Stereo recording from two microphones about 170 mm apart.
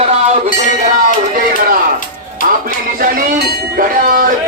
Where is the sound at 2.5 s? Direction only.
55° right (ahead or behind).